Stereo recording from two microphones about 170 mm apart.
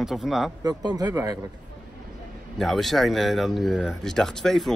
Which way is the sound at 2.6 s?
Centre (ahead or behind).